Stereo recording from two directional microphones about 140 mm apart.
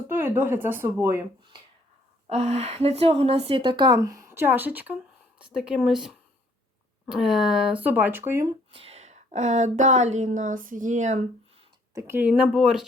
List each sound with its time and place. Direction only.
0.1 s speech: 15° right (ahead or behind)
2.3 s a woman's voice: 50° right (ahead or behind); by 8.4 s 20° right (ahead or behind)
8.4 s a woman's voice: 40° right (ahead or behind); by 11.2 s 60° right (ahead or behind)
11.9 s speech: 15° right (ahead or behind)